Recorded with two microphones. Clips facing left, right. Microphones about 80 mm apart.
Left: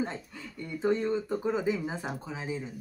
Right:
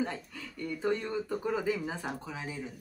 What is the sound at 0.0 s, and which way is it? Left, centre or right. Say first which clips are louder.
Speech: left 1 dB; left.